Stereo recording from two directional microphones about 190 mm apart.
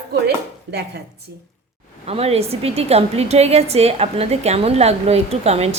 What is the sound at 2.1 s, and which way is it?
A woman's voice, 30° right (ahead or behind).